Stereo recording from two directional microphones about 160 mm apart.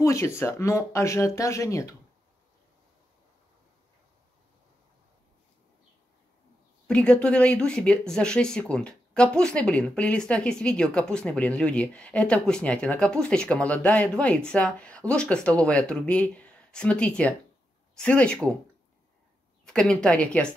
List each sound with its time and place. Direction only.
0.0 s speech: 15° left (ahead or behind)
6.9 s speech: 5° left (ahead or behind)
19.6 s a woman's voice: 5° left (ahead or behind)